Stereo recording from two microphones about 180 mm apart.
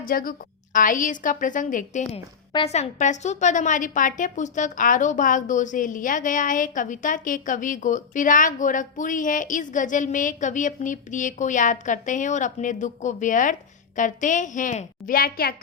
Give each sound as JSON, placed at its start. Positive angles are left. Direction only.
{"t": 0.0, "sound": "a woman's voice", "side_deg": 55}